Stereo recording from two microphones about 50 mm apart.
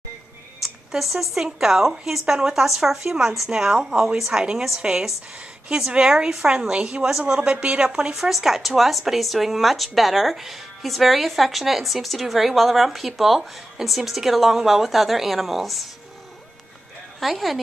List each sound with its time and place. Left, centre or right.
0.6 s a sound: centre
1.3 s speech: centre
17.2 s speech: centre